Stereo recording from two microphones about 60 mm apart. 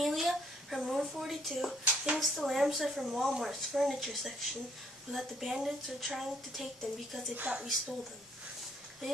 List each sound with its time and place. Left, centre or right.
0.0 s a woman's voice: centre
7.5 s a woman's voice: right